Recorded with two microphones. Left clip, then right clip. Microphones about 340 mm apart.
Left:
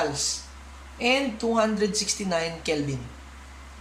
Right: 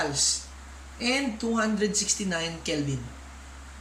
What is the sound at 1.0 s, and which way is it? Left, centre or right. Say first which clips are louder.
A woman's voice: left 4 dB; centre.